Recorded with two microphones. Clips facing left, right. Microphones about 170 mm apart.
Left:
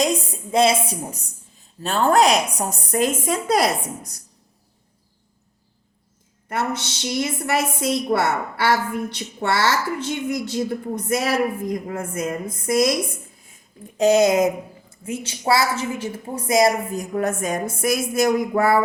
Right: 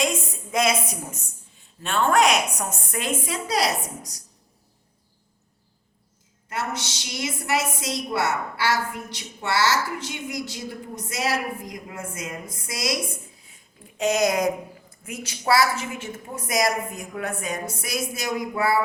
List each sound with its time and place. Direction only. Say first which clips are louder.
0.0 s a woman's voice: left 4 dB; 30° left (ahead or behind); by 4.2 s 55° left (ahead or behind)
6.5 s a woman's voice: left 5 dB; 55° left (ahead or behind)
14.0 s a woman's voice: left 6 dB; 30° left (ahead or behind); by 18.8 s 50° left (ahead or behind)